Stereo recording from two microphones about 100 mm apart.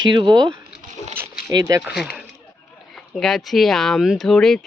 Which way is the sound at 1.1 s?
20° right (ahead or behind).